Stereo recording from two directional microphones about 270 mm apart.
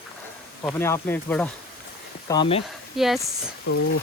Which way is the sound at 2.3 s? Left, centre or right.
Centre.